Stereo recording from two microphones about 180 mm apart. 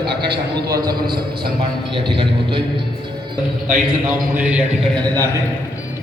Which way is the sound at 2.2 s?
25° right (ahead or behind).